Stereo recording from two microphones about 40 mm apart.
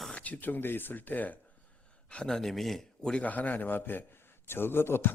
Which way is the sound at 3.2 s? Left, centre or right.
Left.